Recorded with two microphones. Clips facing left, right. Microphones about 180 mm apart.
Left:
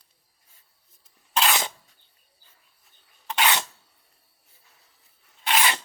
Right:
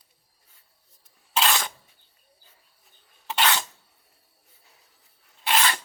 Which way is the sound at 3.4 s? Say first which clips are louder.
Even; 15° left (ahead or behind).